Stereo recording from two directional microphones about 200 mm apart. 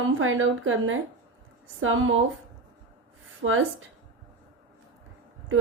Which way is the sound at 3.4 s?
80° right.